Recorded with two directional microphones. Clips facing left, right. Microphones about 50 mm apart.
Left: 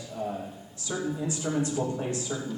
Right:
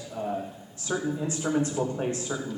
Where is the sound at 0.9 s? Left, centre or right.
Right.